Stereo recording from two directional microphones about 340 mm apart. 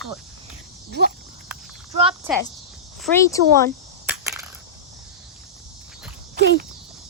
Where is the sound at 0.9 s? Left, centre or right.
Right.